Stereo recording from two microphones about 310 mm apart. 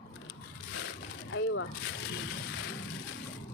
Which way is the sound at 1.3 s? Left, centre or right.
Left.